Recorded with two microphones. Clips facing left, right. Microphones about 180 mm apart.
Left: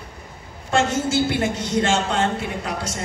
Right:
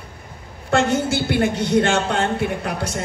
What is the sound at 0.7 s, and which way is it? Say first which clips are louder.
A woman's voice: right 1 dB; 65° right (ahead or behind).